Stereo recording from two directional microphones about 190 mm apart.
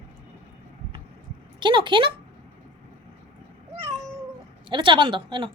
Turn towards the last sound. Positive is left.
turn(degrees=-25)  # may be behind; listen again after turning